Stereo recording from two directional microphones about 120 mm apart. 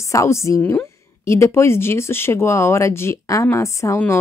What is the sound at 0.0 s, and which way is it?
A woman's voice, 25° left (ahead or behind).